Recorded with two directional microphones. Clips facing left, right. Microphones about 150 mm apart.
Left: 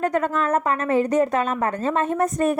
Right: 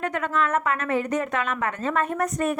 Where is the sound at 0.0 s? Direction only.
40° left (ahead or behind).